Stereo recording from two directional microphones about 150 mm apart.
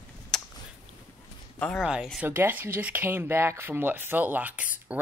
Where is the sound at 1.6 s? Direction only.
5° left (ahead or behind).